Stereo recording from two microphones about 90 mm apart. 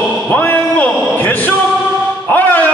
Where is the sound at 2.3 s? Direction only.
20° left (ahead or behind).